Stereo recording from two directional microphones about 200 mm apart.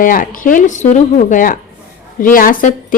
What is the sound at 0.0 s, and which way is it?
Speech, 40° left (ahead or behind).